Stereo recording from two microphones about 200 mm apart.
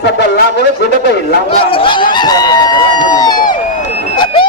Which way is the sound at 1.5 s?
25° left (ahead or behind).